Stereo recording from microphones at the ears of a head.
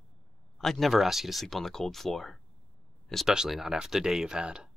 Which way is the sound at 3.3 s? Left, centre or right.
Centre.